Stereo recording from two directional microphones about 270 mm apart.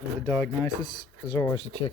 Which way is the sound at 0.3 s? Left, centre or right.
Centre.